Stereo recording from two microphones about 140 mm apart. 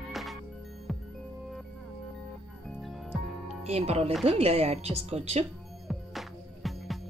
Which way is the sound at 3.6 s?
50° right (ahead or behind).